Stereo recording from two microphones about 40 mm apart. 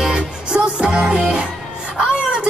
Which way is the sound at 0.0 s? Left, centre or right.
Right.